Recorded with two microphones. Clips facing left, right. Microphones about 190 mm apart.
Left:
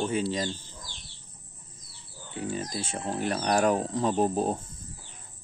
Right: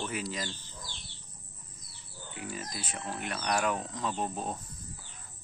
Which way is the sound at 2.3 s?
30° left (ahead or behind).